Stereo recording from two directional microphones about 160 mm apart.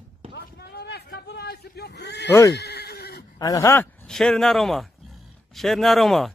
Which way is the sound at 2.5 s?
90° left.